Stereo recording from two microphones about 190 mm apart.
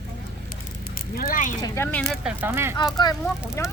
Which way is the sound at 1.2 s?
45° left (ahead or behind).